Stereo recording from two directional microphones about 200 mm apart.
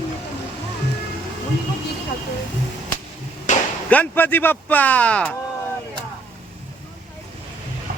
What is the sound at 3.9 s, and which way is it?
Speech, 10° left (ahead or behind).